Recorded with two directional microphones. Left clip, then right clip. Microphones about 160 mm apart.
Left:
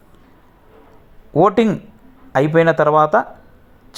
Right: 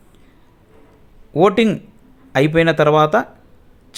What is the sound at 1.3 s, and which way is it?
Speech, centre (ahead or behind).